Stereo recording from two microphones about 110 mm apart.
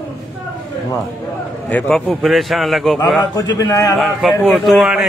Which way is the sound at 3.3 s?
35° left (ahead or behind).